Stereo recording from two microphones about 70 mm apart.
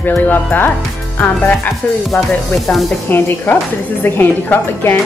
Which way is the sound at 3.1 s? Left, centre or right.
Left.